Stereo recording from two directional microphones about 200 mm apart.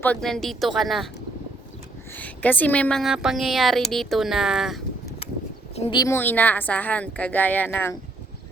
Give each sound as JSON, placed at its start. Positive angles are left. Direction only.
{"t": 0.0, "sound": "a woman's voice", "side_deg": 5}
{"t": 2.1, "sound": "a woman's voice", "side_deg": 10}
{"t": 5.7, "sound": "speech", "side_deg": 30}
{"t": 6.0, "sound": "speech", "side_deg": 10}